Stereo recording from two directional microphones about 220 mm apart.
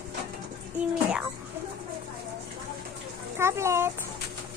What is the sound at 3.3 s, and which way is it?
Speech, 10° right (ahead or behind).